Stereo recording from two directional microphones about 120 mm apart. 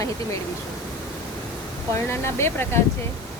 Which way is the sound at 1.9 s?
20° left (ahead or behind).